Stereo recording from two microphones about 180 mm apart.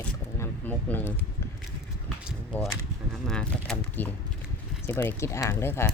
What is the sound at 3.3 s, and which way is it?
Speech, 5° left (ahead or behind).